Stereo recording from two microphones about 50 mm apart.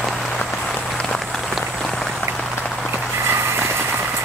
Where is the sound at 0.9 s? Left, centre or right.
Centre.